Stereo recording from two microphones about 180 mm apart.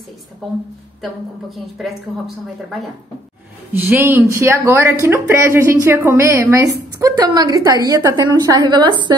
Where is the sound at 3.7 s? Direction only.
15° right (ahead or behind).